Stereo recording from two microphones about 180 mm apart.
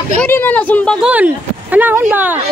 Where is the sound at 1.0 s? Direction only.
5° right (ahead or behind).